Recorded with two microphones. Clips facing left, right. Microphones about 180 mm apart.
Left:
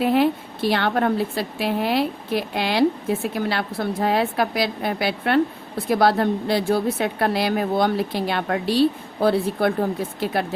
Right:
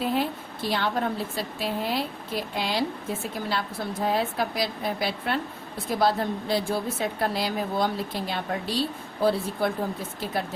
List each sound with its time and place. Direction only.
0.0 s a woman's voice: 70° left (ahead or behind)